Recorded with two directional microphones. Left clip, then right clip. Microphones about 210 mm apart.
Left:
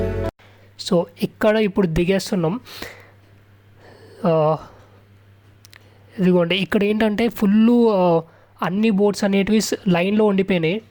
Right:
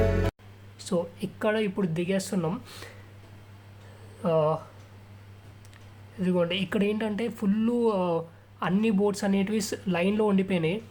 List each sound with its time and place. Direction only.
0.8 s speech: 40° left (ahead or behind)
4.2 s speech: 40° left (ahead or behind)
5.7 s speech: 40° left (ahead or behind)